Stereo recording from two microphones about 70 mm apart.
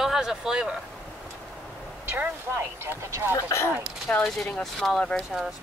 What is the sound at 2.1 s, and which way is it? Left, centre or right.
Speech, right.